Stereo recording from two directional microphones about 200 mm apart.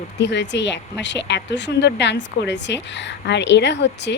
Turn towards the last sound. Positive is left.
turn(degrees=60)  # may be behind; listen again after turning